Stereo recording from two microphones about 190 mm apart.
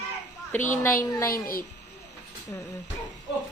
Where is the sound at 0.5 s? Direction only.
45° left (ahead or behind).